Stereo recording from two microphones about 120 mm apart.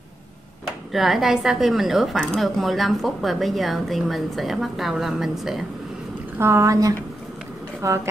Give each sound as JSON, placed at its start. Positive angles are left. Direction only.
{"t": 0.9, "sound": "a woman's voice", "side_deg": 0}
{"t": 6.3, "sound": "speech", "side_deg": -20}